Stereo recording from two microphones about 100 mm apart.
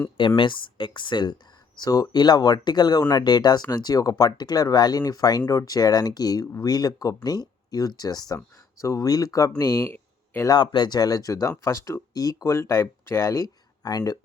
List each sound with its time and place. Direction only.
0.2 s speech: 55° left (ahead or behind); by 10.5 s 25° left (ahead or behind)
10.5 s speech: 50° left (ahead or behind)